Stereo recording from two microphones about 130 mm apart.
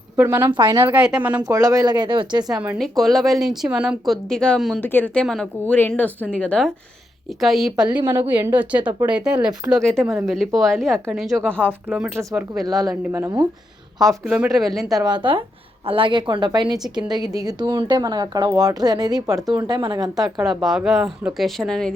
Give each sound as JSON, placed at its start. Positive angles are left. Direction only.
{"t": 0.2, "sound": "speech", "side_deg": -15}
{"t": 0.4, "sound": "a woman's voice", "side_deg": -35}
{"t": 0.7, "sound": "speech", "side_deg": -15}
{"t": 1.4, "sound": "a woman's voice", "side_deg": -30}
{"t": 2.7, "sound": "speech", "side_deg": 0}
{"t": 5.2, "sound": "speech", "side_deg": 5}
{"t": 7.9, "sound": "speech", "side_deg": -15}
{"t": 10.0, "sound": "speech", "side_deg": -20}
{"t": 10.2, "sound": "speech", "side_deg": 0}
{"t": 11.3, "sound": "speech", "side_deg": -15}
{"t": 14.3, "sound": "speech", "side_deg": -5}
{"t": 15.0, "sound": "a woman's voice", "side_deg": -35}
{"t": 20.4, "sound": "speech", "side_deg": 0}